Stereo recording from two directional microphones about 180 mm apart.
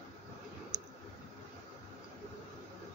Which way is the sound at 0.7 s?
5° right (ahead or behind).